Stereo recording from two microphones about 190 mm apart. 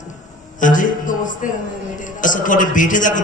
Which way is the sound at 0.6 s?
45° left (ahead or behind).